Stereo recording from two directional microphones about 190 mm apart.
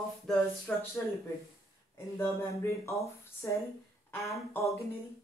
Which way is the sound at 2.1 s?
15° left (ahead or behind).